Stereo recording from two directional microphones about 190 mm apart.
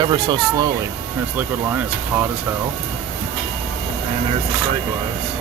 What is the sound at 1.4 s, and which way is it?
Speech, 10° right (ahead or behind).